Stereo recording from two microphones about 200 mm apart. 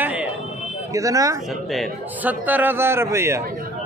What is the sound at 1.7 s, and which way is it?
A man's voice, 5° right (ahead or behind).